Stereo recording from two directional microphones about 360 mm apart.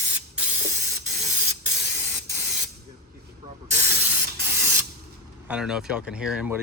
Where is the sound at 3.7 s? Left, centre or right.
Centre.